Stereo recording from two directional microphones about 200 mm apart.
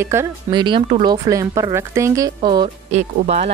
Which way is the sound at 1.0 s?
20° right (ahead or behind).